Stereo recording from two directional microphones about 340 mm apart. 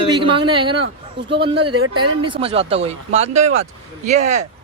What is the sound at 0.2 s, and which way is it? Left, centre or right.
A woman's voice, centre.